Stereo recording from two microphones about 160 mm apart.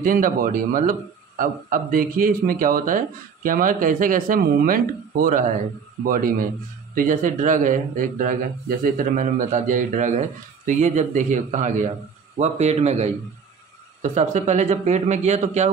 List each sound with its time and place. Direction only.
0.0 s a man's voice: 60° right (ahead or behind)